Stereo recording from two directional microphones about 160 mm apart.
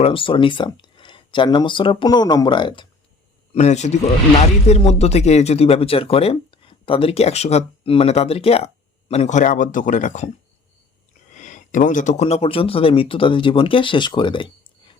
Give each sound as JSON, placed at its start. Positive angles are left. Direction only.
{"t": 0.0, "sound": "speech", "side_deg": 35}
{"t": 3.5, "sound": "a man's voice", "side_deg": 45}
{"t": 11.3, "sound": "speech", "side_deg": 50}